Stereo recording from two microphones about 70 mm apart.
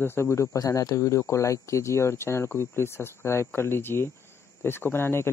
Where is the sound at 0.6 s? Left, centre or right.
Left.